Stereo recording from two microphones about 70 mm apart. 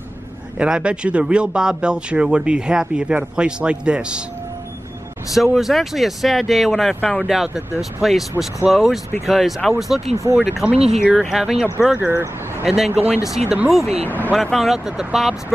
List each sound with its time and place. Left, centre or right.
0.6 s speech: centre
5.3 s speech: centre
7.0 s speech: centre
7.2 s speech: centre
10.7 s speech: centre
11.2 s speech: centre
12.1 s speech: right
12.6 s speech: centre
14.0 s speech: left
14.3 s speech: centre